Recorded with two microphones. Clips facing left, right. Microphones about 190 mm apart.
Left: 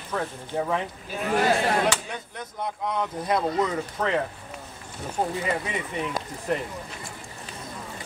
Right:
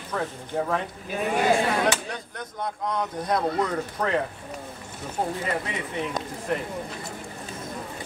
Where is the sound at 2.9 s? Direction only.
5° left (ahead or behind).